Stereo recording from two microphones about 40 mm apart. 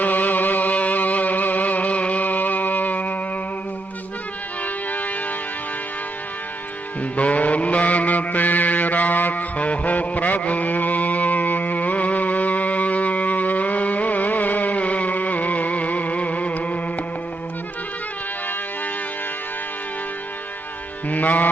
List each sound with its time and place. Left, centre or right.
0.0 s music: left
7.2 s mantra: left
9.6 s music: left
21.1 s music: left